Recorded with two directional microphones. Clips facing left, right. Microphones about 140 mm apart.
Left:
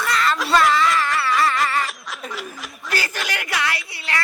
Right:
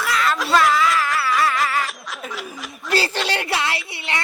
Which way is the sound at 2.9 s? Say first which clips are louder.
Right 5 dB; 30° right (ahead or behind).